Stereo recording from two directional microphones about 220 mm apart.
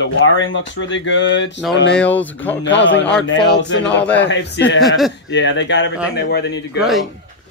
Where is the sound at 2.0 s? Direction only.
5° left (ahead or behind).